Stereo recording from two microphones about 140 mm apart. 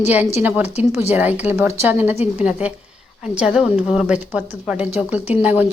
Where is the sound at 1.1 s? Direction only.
10° right (ahead or behind).